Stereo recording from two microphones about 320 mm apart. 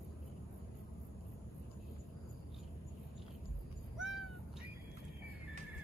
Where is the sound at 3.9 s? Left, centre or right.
Centre.